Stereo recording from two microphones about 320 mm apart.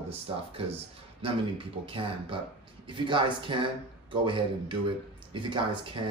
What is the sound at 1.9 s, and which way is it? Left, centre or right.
Speech, centre.